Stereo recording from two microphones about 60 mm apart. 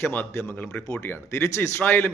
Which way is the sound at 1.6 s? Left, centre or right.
Left.